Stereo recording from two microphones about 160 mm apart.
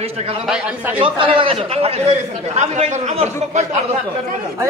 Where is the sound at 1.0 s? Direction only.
35° right (ahead or behind).